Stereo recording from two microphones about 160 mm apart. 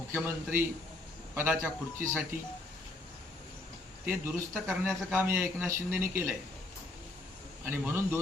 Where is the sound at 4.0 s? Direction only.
15° right (ahead or behind).